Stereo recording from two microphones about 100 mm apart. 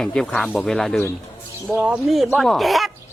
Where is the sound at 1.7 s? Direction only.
10° right (ahead or behind).